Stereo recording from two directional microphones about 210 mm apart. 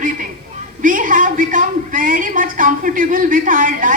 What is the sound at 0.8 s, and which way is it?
A man's voice, 40° right (ahead or behind).